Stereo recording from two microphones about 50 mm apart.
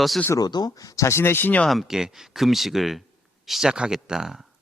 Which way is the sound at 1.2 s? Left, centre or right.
Left.